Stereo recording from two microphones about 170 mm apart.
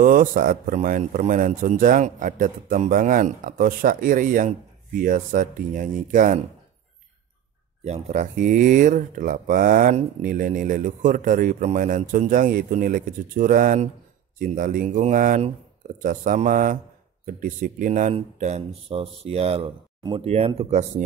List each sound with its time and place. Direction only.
0.0 s a man's voice: 55° right (ahead or behind)
7.8 s a man's voice: 40° right (ahead or behind)
18.1 s speech: 40° right (ahead or behind)